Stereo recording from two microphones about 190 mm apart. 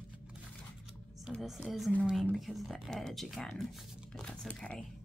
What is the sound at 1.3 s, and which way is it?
Speech, centre (ahead or behind).